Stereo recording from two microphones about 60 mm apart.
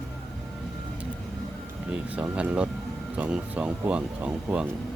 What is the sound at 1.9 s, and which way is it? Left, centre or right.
Speech, right.